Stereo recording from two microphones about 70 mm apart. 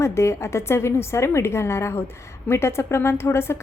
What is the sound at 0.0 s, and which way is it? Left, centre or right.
A woman's voice, left.